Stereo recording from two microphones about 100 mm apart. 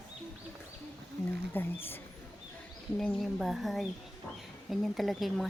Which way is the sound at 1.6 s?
20° left (ahead or behind).